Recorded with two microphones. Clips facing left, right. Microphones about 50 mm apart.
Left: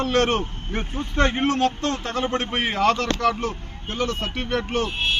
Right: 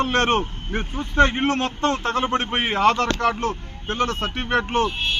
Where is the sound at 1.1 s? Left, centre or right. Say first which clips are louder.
Right 4 dB; centre.